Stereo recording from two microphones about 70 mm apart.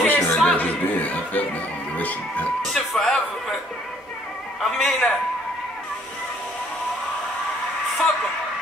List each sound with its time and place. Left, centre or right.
0.0 s music: centre
0.6 s speech: left
2.0 s music: left
2.6 s a sound: centre
4.6 s a man's voice: centre